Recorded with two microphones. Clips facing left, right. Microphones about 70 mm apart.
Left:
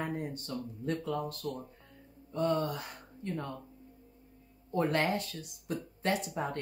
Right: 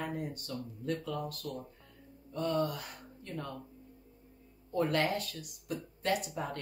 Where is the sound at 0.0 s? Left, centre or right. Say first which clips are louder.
Left 2 dB; left.